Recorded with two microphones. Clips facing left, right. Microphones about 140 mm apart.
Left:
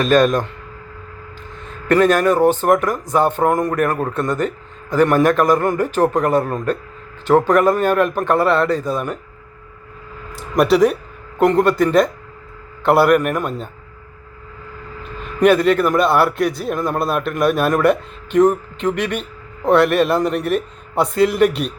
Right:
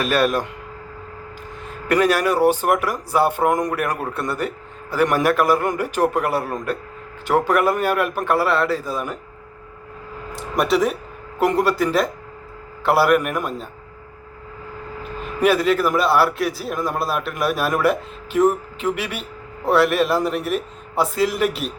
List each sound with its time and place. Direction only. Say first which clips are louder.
0.0 s speech: left 5 dB; 10° right (ahead or behind)
1.6 s speech: left 4 dB; 10° right (ahead or behind)
10.3 s a man's voice: left 5 dB; centre (ahead or behind)
15.2 s a man's voice: left 4 dB; 5° right (ahead or behind)